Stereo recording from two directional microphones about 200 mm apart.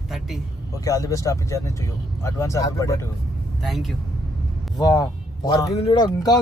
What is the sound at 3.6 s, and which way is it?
Speech, centre (ahead or behind).